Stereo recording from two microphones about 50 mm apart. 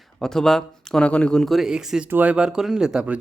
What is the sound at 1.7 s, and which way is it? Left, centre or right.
Speech, centre.